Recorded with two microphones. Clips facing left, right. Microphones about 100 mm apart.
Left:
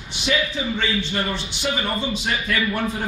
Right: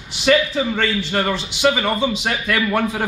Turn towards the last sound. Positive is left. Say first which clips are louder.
# right 4 dB
turn(degrees=-90)